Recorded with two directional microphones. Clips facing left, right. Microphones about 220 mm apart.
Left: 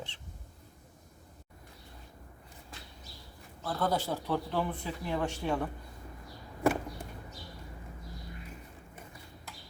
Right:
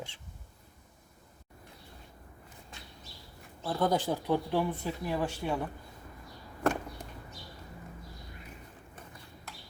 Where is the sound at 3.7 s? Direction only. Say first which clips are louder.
Right 3 dB; 15° right (ahead or behind).